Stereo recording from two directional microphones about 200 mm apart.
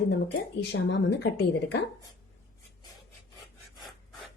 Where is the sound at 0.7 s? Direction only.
60° left (ahead or behind).